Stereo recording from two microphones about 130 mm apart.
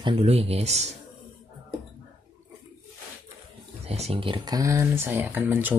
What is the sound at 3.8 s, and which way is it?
Speech, 55° right (ahead or behind).